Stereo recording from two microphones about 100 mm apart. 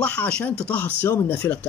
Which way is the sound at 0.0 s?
10° left (ahead or behind).